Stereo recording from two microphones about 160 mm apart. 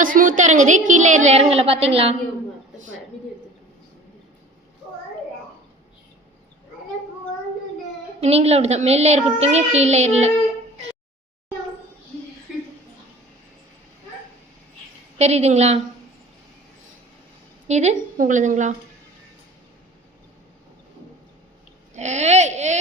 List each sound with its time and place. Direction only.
0.0 s a woman's voice: 55° right (ahead or behind); by 2.1 s 40° right (ahead or behind)
8.2 s a woman's voice: 40° right (ahead or behind)
15.2 s a woman's voice: 45° right (ahead or behind)
17.7 s a woman's voice: 45° right (ahead or behind)
21.9 s a woman's voice: 45° right (ahead or behind)